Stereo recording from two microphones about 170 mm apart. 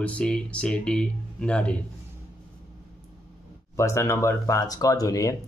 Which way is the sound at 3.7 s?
15° left (ahead or behind).